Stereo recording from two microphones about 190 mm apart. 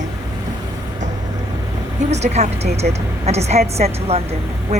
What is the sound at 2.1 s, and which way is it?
A woman's voice, 35° right (ahead or behind).